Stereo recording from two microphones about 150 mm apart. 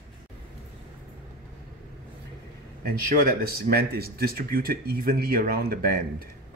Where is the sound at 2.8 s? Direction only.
75° right (ahead or behind).